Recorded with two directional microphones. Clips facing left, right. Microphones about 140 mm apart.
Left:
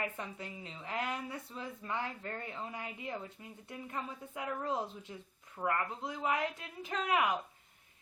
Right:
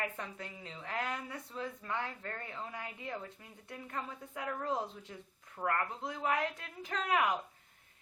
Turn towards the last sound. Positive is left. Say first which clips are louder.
# even
turn(degrees=5)  # may be behind; listen again after turning